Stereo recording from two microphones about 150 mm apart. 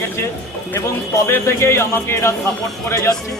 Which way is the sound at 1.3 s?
20° left (ahead or behind).